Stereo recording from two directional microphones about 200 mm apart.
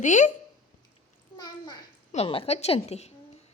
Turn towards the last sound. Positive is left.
turn(degrees=35)  # may be behind; listen again after turning